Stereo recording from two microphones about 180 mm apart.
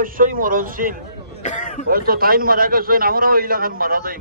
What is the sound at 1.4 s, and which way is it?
Speech, 45° left (ahead or behind).